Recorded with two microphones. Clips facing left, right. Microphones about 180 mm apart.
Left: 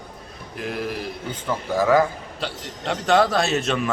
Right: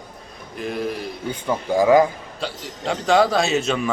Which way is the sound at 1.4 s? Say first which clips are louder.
Right 3 dB; 15° right (ahead or behind).